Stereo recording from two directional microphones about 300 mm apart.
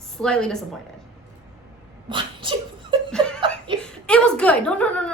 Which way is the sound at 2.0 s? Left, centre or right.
Centre.